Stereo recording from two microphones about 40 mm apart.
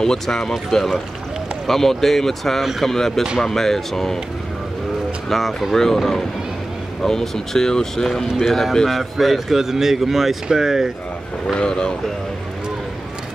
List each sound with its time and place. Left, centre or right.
0.0 s speech: centre
5.3 s a man's voice: centre
8.8 s a man's voice: centre
11.4 s speech: centre